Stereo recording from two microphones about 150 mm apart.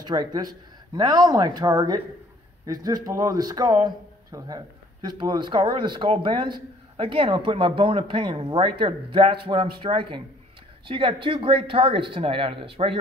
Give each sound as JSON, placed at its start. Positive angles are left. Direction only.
{"t": 0.0, "sound": "speech", "side_deg": -25}